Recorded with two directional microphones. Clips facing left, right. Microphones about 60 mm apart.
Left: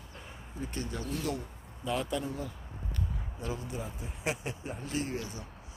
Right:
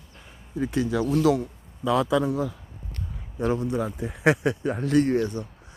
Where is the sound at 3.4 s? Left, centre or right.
Right.